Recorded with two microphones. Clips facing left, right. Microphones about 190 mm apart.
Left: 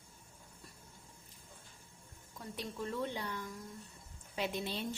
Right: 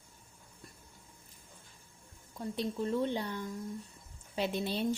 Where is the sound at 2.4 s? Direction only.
30° right (ahead or behind).